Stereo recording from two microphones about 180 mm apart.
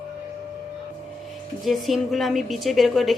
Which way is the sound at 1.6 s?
Centre (ahead or behind).